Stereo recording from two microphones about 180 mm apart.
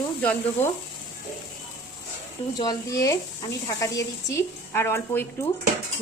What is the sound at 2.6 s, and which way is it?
A woman's voice, 20° left (ahead or behind).